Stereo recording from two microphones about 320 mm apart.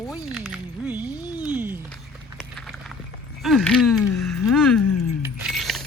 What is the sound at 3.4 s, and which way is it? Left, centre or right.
Speech, centre.